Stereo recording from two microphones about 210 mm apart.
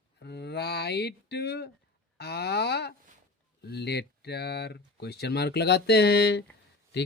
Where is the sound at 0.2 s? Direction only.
50° left (ahead or behind).